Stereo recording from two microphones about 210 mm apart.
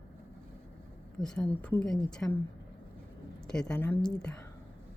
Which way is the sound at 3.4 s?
5° left (ahead or behind).